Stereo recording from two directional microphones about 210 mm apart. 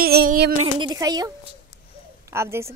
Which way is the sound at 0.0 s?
45° right (ahead or behind).